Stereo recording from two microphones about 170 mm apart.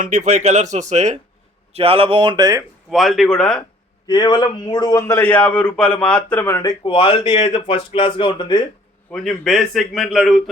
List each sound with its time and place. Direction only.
0.0 s speech: 45° right (ahead or behind); by 2.6 s 20° right (ahead or behind)
2.9 s a man's voice: centre (ahead or behind)
4.0 s a man's voice: 25° left (ahead or behind); by 6.6 s 10° left (ahead or behind)
6.6 s speech: 25° left (ahead or behind)
9.1 s a man's voice: centre (ahead or behind)